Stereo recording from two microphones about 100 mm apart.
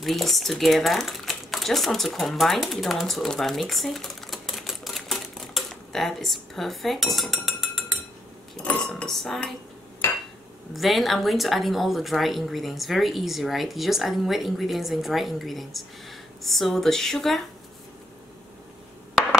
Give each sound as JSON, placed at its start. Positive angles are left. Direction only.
{"t": 0.0, "sound": "speech", "side_deg": 0}
{"t": 8.5, "sound": "a woman's voice", "side_deg": 5}
{"t": 10.0, "sound": "hammer", "side_deg": 25}
{"t": 10.7, "sound": "a woman's voice", "side_deg": 0}